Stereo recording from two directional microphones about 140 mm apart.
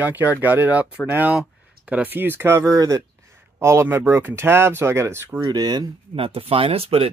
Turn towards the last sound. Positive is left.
turn(degrees=-45)  # may be behind; listen again after turning